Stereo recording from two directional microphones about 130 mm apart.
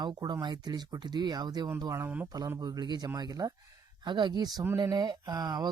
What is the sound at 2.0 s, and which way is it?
Speech, 15° right (ahead or behind).